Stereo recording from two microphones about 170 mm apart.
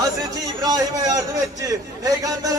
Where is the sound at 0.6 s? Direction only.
20° right (ahead or behind).